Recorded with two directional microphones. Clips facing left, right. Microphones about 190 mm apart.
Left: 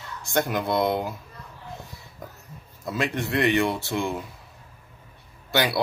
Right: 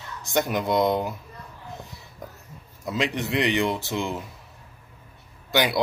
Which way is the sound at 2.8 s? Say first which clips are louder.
Right 1 dB; 15° right (ahead or behind).